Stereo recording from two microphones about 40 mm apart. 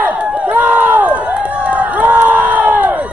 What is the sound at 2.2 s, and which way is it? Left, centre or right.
Crowd, right.